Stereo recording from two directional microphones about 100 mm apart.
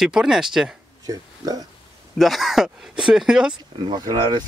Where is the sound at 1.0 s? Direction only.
35° right (ahead or behind).